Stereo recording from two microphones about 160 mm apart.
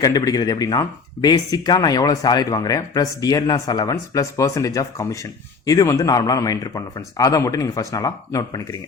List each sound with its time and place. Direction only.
0.0 s speech: 25° left (ahead or behind)